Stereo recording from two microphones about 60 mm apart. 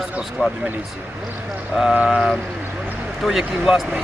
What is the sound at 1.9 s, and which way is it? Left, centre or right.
Speech, centre.